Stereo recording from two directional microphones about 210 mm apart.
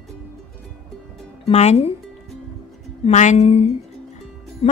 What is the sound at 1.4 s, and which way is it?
Speech, 30° left (ahead or behind).